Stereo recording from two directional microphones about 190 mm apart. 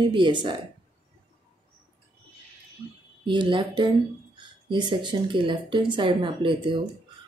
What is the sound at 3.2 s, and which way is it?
Speech, 25° right (ahead or behind).